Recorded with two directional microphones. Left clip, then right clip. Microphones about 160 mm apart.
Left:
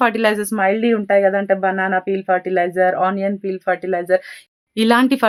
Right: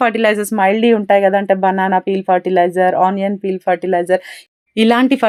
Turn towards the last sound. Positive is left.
turn(degrees=-10)  # may be behind; listen again after turning